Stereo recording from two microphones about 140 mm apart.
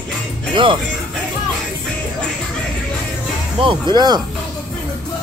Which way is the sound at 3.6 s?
35° right (ahead or behind).